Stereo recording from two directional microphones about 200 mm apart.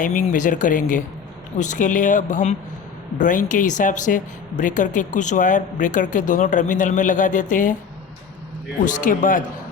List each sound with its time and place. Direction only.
0.0 s a woman's voice: 40° left (ahead or behind)
8.8 s a woman's voice: 40° left (ahead or behind)